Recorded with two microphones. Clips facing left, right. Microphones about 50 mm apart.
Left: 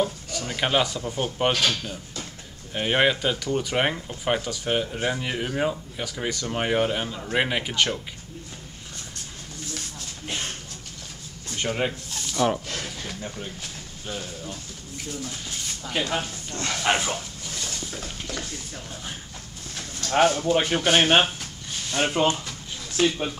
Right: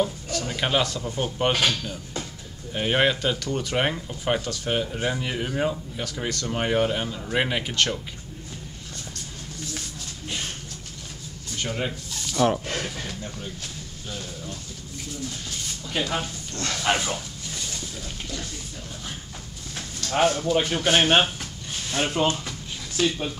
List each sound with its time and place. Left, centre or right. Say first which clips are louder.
0.0 s a sound: right 1 dB; centre
1.5 s speech: right 3 dB; centre
2.7 s speech: even; centre
11.5 s a sound: left 3 dB; centre
12.4 s speech: right 2 dB; centre
12.6 s speech: right 3 dB; right
14.0 s speech: left 2 dB; centre
16.1 s speech: left 1 dB; centre
20.2 s speech: left 2 dB; centre
20.4 s speech: left 1 dB; centre
20.8 s speech: even; centre